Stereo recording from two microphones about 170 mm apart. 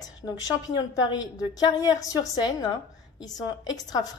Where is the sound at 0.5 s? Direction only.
20° left (ahead or behind).